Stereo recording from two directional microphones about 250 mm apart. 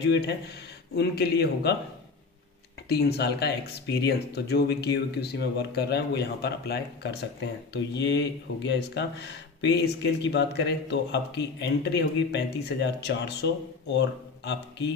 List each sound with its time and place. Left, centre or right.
0.0 s speech: left
2.9 s speech: left